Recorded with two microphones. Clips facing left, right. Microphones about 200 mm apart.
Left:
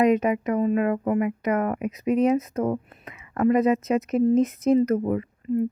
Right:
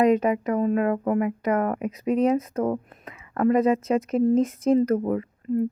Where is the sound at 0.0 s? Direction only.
35° right (ahead or behind).